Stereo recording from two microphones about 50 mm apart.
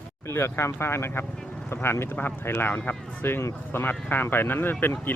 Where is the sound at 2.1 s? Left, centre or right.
Left.